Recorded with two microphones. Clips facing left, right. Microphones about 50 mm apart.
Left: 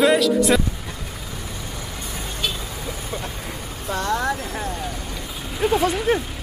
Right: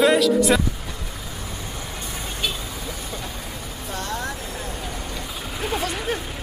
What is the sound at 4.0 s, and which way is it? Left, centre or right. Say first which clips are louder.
Speech: left 7 dB; left.